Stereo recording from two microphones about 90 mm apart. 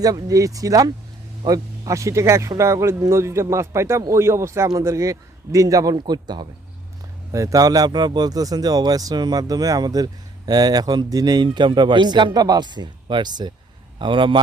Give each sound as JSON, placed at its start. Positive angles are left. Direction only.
{"t": 0.0, "sound": "a man's voice", "side_deg": -40}
{"t": 7.3, "sound": "speech", "side_deg": -40}
{"t": 11.4, "sound": "speech", "side_deg": -60}